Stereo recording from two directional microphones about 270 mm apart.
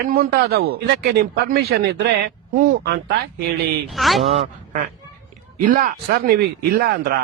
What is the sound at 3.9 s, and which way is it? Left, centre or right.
Speech, centre.